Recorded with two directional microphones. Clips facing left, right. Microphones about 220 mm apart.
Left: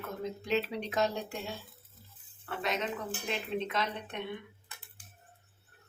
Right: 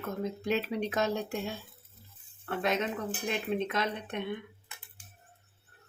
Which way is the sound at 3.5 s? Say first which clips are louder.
Right 3 dB; 55° right (ahead or behind).